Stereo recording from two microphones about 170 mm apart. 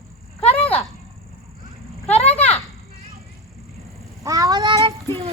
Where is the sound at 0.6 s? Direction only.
10° left (ahead or behind).